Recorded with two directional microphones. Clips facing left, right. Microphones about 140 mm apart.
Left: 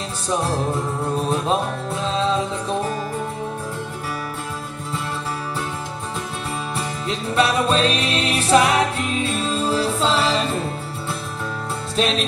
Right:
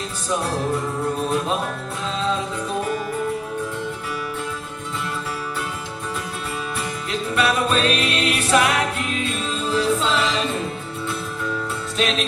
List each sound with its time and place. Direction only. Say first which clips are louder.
7.1 s music: left 2 dB; 30° left (ahead or behind)
12.0 s music: left 2 dB; 35° left (ahead or behind)